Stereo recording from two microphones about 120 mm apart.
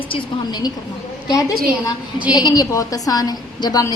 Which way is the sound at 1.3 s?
30° left (ahead or behind).